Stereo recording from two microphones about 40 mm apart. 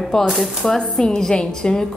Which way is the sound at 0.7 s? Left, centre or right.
Centre.